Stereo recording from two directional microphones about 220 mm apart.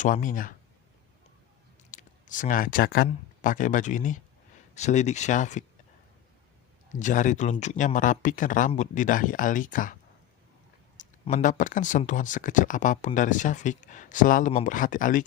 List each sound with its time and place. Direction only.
0.0 s speech: 35° left (ahead or behind)
1.9 s speech: 35° left (ahead or behind)
7.0 s speech: 35° left (ahead or behind)
10.9 s speech: 35° left (ahead or behind)